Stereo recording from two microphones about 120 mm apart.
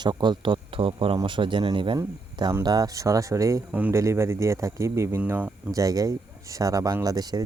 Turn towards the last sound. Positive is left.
turn(degrees=-35)  # may be behind; listen again after turning